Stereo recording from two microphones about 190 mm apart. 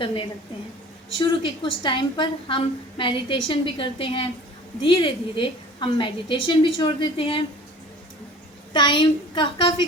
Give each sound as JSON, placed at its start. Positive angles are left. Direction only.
{"t": 0.0, "sound": "a woman's voice", "side_deg": 25}
{"t": 8.7, "sound": "a woman's voice", "side_deg": 25}